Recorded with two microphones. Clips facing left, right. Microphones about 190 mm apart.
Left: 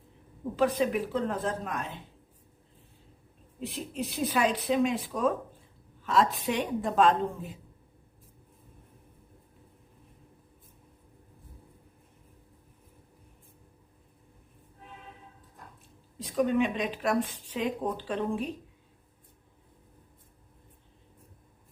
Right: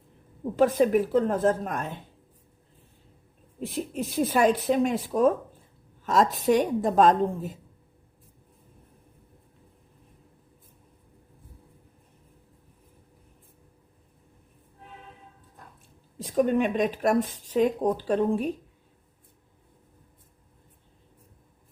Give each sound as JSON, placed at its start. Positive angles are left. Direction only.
{"t": 0.5, "sound": "speech", "side_deg": -45}
{"t": 3.6, "sound": "a woman's voice", "side_deg": -50}
{"t": 16.1, "sound": "speech", "side_deg": -45}